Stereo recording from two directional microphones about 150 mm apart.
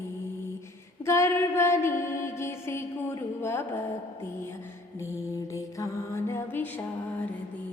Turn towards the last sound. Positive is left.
turn(degrees=20)  # may be behind; listen again after turning